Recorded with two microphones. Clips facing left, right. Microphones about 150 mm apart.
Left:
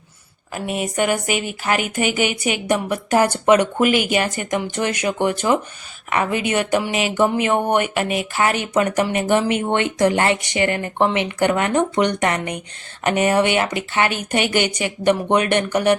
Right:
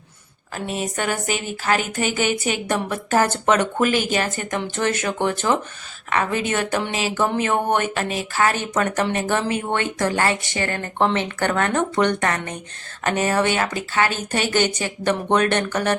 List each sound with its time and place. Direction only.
0.5 s speech: 10° left (ahead or behind)